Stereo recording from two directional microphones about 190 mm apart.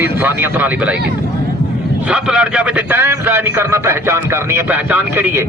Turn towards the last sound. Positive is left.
turn(degrees=-10)  # may be behind; listen again after turning